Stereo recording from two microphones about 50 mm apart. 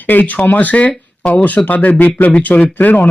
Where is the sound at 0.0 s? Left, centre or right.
Left.